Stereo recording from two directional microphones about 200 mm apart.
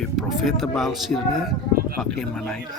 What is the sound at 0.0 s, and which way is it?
Speech, centre (ahead or behind).